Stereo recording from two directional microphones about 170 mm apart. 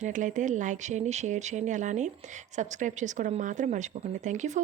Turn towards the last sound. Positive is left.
turn(degrees=-45)  # may be behind; listen again after turning